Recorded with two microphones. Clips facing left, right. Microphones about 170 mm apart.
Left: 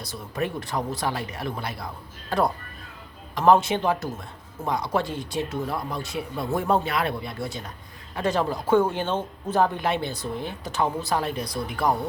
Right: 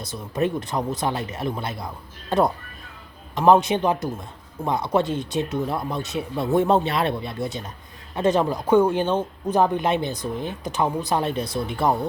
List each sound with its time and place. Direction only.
0.0 s a man's voice: 20° right (ahead or behind)